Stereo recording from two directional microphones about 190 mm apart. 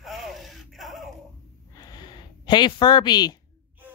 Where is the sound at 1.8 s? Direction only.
20° left (ahead or behind).